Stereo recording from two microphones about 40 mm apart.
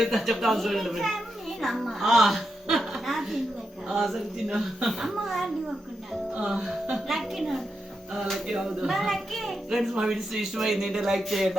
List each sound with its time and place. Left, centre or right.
0.0 s a child's voice: centre
6.5 s a child's voice: centre
8.5 s speech: centre
8.9 s a child's voice: centre
10.0 s a child's voice: centre